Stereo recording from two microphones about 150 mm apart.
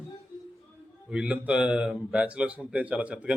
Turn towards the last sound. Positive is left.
turn(degrees=-10)  # may be behind; listen again after turning